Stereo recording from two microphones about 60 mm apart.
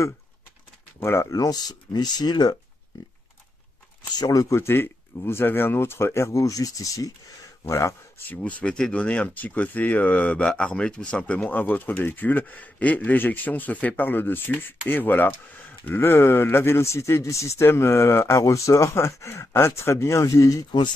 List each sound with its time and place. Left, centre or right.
1.0 s speech: left
1.3 s speech: left
4.3 s speech: left
4.6 s speech: left
6.4 s speech: left
7.6 s speech: left
8.5 s speech: left
18.4 s speech: left